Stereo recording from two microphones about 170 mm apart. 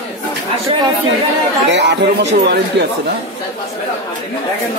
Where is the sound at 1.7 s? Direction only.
90° right.